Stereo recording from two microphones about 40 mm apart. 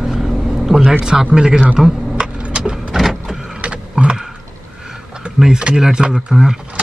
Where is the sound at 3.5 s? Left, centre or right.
Right.